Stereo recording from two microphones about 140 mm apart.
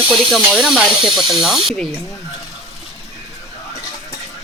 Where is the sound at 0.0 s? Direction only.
40° right (ahead or behind).